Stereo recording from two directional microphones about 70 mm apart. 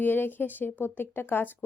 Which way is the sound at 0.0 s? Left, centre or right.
Left.